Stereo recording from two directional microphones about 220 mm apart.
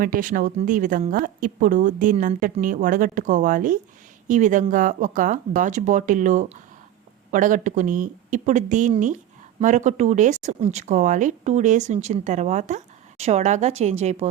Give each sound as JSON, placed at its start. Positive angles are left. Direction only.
{"t": 0.0, "sound": "speech", "side_deg": -40}